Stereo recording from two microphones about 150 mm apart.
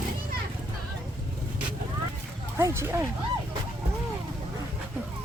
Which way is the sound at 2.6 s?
15° right (ahead or behind).